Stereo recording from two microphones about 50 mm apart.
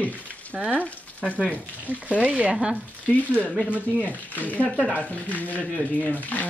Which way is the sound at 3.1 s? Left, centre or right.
Left.